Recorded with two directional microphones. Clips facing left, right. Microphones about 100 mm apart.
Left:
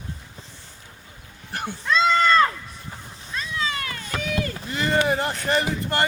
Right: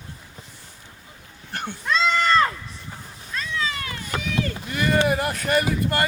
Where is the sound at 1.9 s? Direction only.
35° left (ahead or behind).